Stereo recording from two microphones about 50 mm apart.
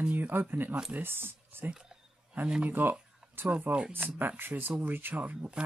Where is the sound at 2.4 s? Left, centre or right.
Right.